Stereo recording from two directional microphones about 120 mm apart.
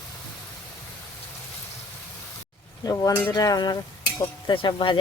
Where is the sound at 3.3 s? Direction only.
35° left (ahead or behind).